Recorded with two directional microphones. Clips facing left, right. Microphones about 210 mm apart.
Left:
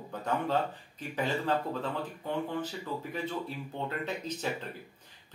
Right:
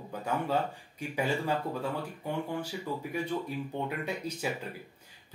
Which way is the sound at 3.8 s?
10° right (ahead or behind).